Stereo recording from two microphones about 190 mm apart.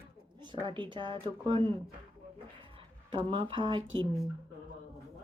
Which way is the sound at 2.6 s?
25° right (ahead or behind).